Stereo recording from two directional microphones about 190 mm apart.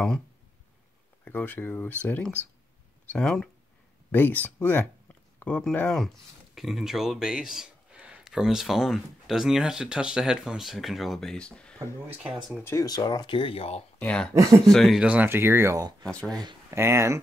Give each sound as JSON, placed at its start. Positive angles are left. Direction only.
{"t": 1.2, "sound": "speech", "side_deg": 10}
{"t": 12.7, "sound": "speech", "side_deg": 20}
{"t": 13.9, "sound": "speech", "side_deg": 5}
{"t": 16.0, "sound": "speech", "side_deg": 5}
{"t": 16.3, "sound": "speech", "side_deg": -15}